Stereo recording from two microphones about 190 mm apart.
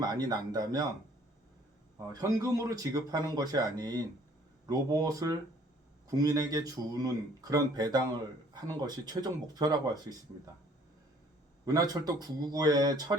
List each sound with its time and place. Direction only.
0.0 s speech: 20° right (ahead or behind)
2.2 s speech: 15° right (ahead or behind)
11.6 s speech: 20° right (ahead or behind)